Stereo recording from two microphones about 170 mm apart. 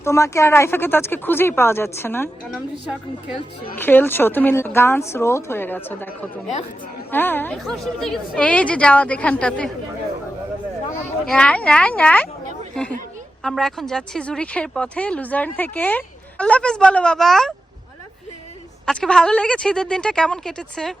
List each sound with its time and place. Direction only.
0.0 s a woman's voice: 15° left (ahead or behind)
2.5 s speech: centre (ahead or behind)
3.8 s a woman's voice: 10° left (ahead or behind)
11.3 s a woman's voice: 5° left (ahead or behind)
13.4 s speech: centre (ahead or behind)
18.9 s speech: 5° left (ahead or behind)